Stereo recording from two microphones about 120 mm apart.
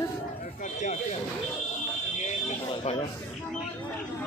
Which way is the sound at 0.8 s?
80° left.